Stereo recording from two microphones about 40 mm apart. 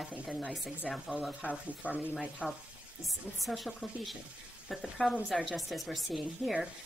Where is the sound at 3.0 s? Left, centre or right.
Centre.